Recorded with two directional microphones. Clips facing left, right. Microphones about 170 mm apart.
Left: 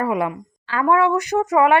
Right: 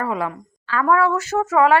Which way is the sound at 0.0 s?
20° left (ahead or behind).